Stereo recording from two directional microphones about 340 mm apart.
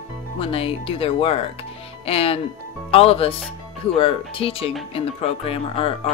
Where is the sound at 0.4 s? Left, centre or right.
Centre.